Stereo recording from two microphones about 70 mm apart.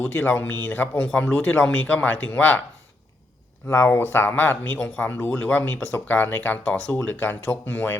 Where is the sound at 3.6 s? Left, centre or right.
Left.